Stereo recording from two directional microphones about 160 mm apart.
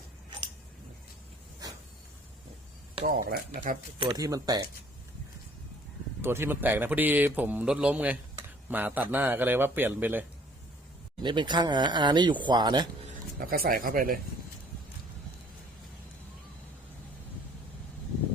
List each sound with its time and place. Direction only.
1.6 s a sound: 25° right (ahead or behind)
3.1 s speech: 65° right (ahead or behind)
4.0 s speech: 20° right (ahead or behind)
6.2 s speech: 15° right (ahead or behind)
11.2 s speech: 30° right (ahead or behind)
13.1 s speech: 65° right (ahead or behind)